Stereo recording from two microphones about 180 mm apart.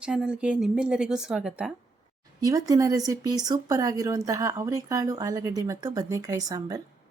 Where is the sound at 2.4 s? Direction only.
20° right (ahead or behind).